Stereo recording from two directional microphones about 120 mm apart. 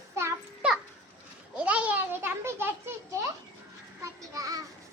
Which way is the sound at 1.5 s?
10° right (ahead or behind).